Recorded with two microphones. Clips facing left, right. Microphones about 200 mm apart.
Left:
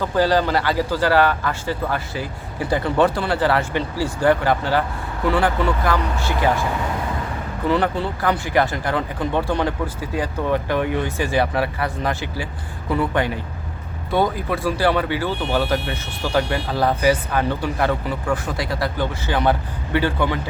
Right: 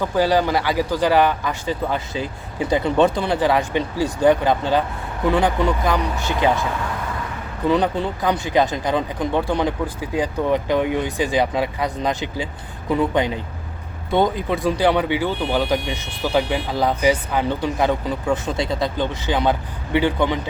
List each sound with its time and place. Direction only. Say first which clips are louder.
0.0 s a man's voice: even; 15° right (ahead or behind)
7.7 s a man's voice: right 1 dB; 15° right (ahead or behind)